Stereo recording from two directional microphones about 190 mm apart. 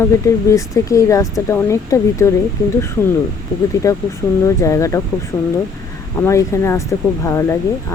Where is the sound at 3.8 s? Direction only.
15° left (ahead or behind).